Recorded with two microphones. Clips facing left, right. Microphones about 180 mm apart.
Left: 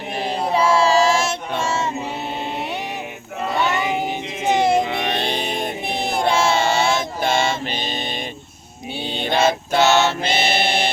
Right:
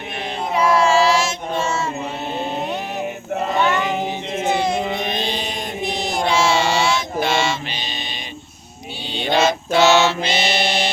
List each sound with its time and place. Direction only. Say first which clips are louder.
0.5 s music: right 1 dB; 30° left (ahead or behind); by 1.6 s 55° left (ahead or behind)
3.6 s child singing: even; 10° left (ahead or behind)
4.9 s mantra: left 1 dB; 70° left (ahead or behind); by 7.9 s 50° left (ahead or behind)
9.1 s choir: right 1 dB; 50° left (ahead or behind)